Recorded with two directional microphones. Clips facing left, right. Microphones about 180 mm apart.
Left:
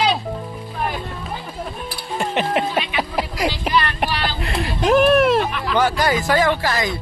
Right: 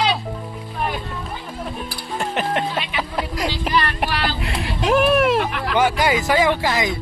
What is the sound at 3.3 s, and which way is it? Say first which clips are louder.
Speech: left 1 dB; centre (ahead or behind).